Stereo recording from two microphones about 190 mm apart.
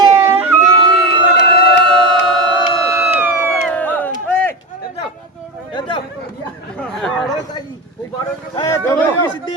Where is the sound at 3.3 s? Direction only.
10° left (ahead or behind).